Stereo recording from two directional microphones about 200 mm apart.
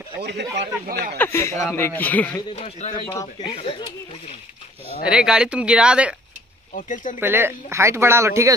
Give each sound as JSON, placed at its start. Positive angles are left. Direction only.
{"t": 0.2, "sound": "speech", "side_deg": -60}
{"t": 1.1, "sound": "speech", "side_deg": 10}
{"t": 2.5, "sound": "speech", "side_deg": 30}
{"t": 5.0, "sound": "speech", "side_deg": -5}
{"t": 6.7, "sound": "speech", "side_deg": 40}
{"t": 7.2, "sound": "speech", "side_deg": -10}